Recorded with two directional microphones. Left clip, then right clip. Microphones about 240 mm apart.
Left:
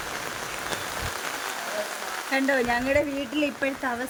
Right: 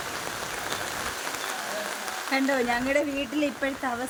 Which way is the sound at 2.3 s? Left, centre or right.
Centre.